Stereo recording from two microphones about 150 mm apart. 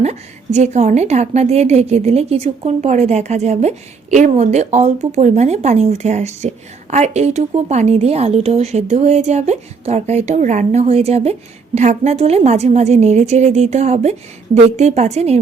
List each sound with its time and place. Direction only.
0.0 s speech: 50° right (ahead or behind)